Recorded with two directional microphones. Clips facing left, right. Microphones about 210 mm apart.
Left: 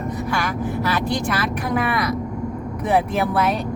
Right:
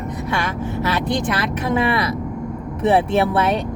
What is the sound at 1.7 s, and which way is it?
Speech, 25° right (ahead or behind).